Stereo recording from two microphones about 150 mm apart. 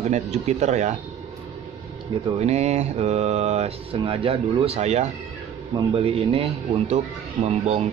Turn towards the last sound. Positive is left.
turn(degrees=-45)  # may be behind; listen again after turning